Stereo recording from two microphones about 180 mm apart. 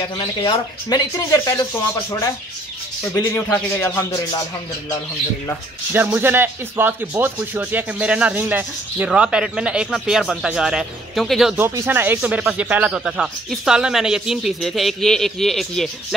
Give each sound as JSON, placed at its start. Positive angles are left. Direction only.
{"t": 0.0, "sound": "speech", "side_deg": 25}
{"t": 3.1, "sound": "a man's voice", "side_deg": 15}
{"t": 5.9, "sound": "speech", "side_deg": -10}
{"t": 11.6, "sound": "speech", "side_deg": -15}